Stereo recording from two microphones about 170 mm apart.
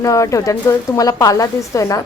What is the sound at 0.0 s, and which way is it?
Speech, 20° left (ahead or behind).